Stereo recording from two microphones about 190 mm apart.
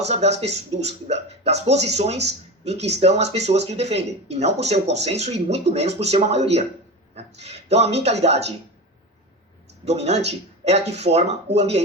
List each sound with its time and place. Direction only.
0.1 s speech: 35° right (ahead or behind)
9.8 s speech: 35° right (ahead or behind)